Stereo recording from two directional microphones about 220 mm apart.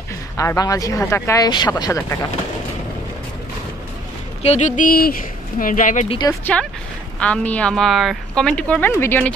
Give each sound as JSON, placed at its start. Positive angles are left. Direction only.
{"t": 0.4, "sound": "speech", "side_deg": 15}
{"t": 4.4, "sound": "speech", "side_deg": 30}
{"t": 6.4, "sound": "a woman's voice", "side_deg": 5}